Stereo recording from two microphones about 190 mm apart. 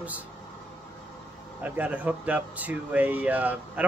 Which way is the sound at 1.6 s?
10° right (ahead or behind).